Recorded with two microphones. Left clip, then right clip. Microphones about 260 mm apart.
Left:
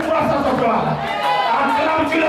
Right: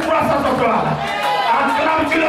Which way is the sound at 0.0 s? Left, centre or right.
Centre.